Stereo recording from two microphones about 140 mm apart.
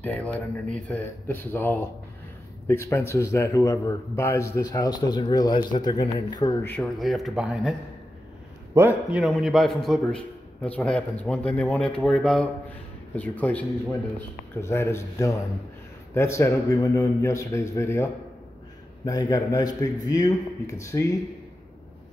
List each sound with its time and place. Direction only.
0.0 s a man's voice: 10° left (ahead or behind); by 6.6 s 30° left (ahead or behind)
6.6 s speech: 15° left (ahead or behind)
7.0 s a man's voice: centre (ahead or behind)
8.7 s a man's voice: 15° right (ahead or behind)
9.2 s a man's voice: centre (ahead or behind); by 21.1 s 20° left (ahead or behind)